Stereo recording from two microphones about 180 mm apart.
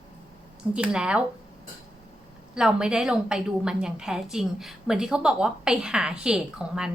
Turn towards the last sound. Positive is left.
turn(degrees=-5)  # may be behind; listen again after turning